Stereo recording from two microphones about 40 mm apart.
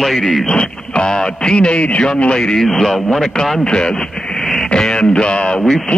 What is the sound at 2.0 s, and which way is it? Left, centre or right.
Speech, left.